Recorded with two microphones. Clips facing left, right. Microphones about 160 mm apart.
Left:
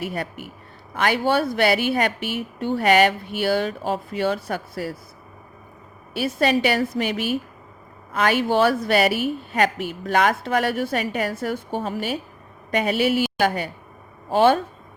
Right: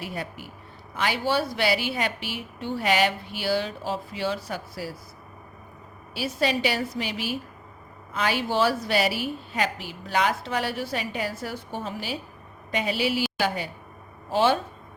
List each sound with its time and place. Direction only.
0.0 s a woman's voice: 60° left (ahead or behind)
6.1 s a woman's voice: 55° left (ahead or behind)